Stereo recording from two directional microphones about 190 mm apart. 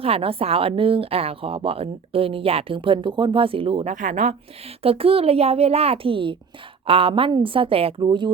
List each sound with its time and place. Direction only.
0.0 s a woman's voice: 30° right (ahead or behind)
3.9 s a child's voice: 40° right (ahead or behind); by 8.3 s 25° right (ahead or behind)